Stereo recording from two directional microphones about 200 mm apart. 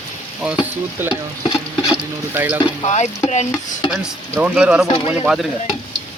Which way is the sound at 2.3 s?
10° right (ahead or behind).